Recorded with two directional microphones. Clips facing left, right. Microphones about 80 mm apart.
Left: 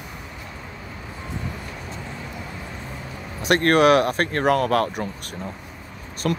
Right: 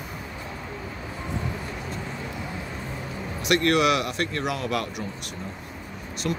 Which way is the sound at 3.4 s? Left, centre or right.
Left.